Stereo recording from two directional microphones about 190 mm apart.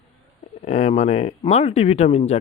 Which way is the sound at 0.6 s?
35° left (ahead or behind).